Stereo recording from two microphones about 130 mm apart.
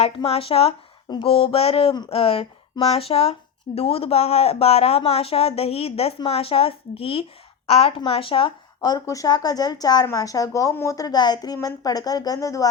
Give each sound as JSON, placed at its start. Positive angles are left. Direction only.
{"t": 0.0, "sound": "speech", "side_deg": 50}